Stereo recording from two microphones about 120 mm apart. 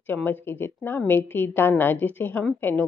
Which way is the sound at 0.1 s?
15° left (ahead or behind).